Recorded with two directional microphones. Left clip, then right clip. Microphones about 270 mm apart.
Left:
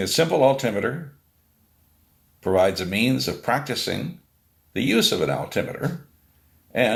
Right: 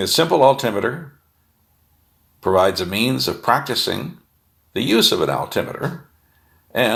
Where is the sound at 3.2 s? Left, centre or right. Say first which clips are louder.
Right 6 dB; right.